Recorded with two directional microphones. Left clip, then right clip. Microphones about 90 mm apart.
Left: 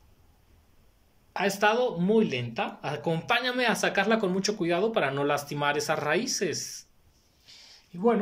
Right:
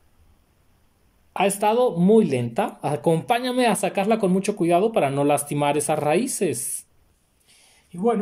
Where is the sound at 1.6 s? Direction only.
60° right (ahead or behind).